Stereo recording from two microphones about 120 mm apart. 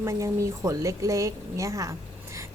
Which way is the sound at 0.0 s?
25° right (ahead or behind).